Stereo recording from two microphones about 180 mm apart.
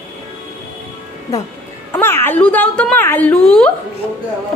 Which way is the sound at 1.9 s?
10° left (ahead or behind).